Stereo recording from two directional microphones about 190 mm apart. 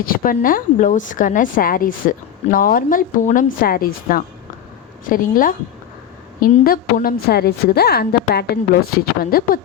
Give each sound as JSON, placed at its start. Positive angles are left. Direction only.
{"t": 0.0, "sound": "a woman's voice", "side_deg": 50}